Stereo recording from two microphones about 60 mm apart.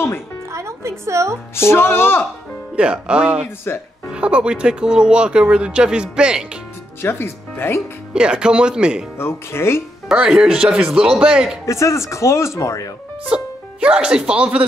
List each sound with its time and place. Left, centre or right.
0.5 s music: right
1.5 s music: left
2.7 s speech: centre
3.4 s music: left
4.1 s speech: centre
7.0 s speech: left
8.1 s speech: centre
9.2 s speech: left
10.1 s speech: centre
11.6 s speech: left
13.3 s speech: centre